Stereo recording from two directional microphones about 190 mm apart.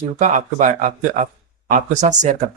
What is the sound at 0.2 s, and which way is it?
Speech, 40° right (ahead or behind).